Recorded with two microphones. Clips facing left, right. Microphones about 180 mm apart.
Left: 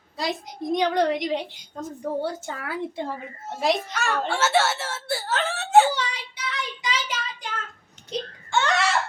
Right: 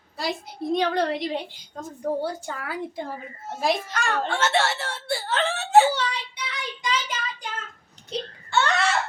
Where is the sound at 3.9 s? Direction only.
10° left (ahead or behind).